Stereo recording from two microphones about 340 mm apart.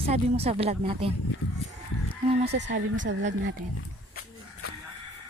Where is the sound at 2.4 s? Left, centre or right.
Right.